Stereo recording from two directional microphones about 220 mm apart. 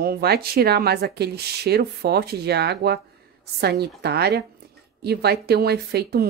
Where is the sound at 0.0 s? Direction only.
45° right (ahead or behind).